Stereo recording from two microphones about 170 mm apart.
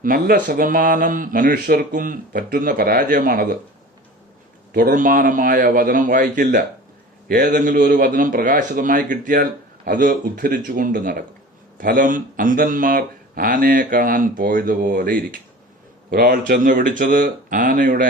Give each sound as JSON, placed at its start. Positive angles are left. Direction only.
{"t": 0.0, "sound": "speech", "side_deg": -55}
{"t": 4.7, "sound": "speech", "side_deg": -55}